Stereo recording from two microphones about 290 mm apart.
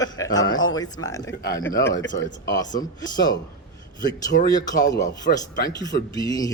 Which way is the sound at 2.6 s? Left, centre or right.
Centre.